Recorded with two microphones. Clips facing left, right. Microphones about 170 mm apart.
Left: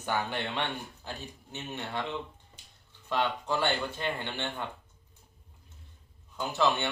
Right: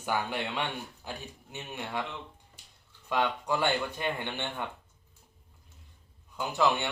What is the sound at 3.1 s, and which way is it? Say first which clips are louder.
A man's voice: right 1 dB; 15° right (ahead or behind).